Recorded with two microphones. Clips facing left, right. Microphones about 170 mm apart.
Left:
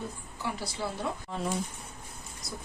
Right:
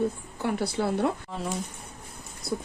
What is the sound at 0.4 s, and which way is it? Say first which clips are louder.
Speech: right 8 dB; 60° right (ahead or behind).